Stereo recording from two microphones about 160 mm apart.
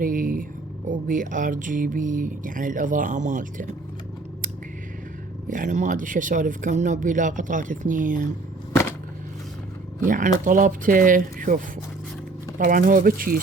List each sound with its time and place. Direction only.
0.0 s a sound: 60° right (ahead or behind)
0.9 s speech: 55° right (ahead or behind)
5.5 s speech: 55° right (ahead or behind)
8.7 s shuffling cards: 15° left (ahead or behind)
10.1 s speech: 55° right (ahead or behind)